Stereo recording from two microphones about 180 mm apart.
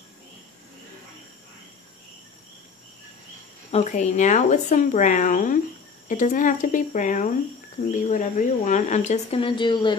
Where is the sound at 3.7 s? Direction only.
40° left (ahead or behind).